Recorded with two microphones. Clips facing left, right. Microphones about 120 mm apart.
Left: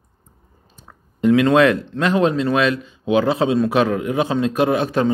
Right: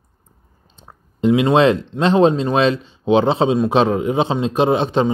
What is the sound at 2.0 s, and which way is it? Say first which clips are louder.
A man's voice: right 3 dB; 25° right (ahead or behind).